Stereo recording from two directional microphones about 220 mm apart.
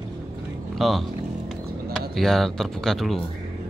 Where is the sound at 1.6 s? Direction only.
45° right (ahead or behind).